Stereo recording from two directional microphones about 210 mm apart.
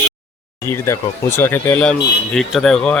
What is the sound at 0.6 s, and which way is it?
Speech, 10° left (ahead or behind).